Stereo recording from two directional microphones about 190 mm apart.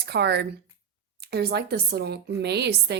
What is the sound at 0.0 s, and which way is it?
A woman's voice, 60° right (ahead or behind).